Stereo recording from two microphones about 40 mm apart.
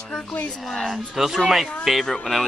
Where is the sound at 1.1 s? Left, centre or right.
Centre.